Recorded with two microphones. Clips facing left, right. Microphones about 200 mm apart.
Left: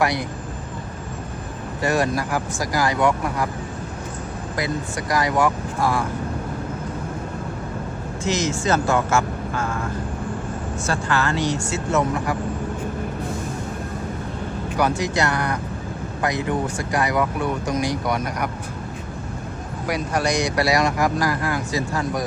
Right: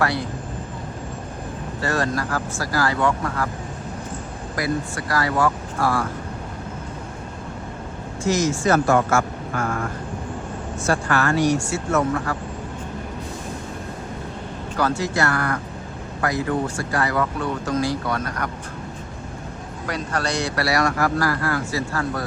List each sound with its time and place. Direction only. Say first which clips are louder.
0.0 s speech: left 1 dB; 15° left (ahead or behind)
1.8 s speech: left 2 dB; 15° left (ahead or behind)
4.5 s speech: right 2 dB; 20° left (ahead or behind)
8.2 s speech: right 3 dB; 20° left (ahead or behind)
11.1 s speech: right 3 dB; 25° left (ahead or behind)
14.8 s speech: left 1 dB; 15° left (ahead or behind)
19.9 s speech: left 3 dB; 10° left (ahead or behind)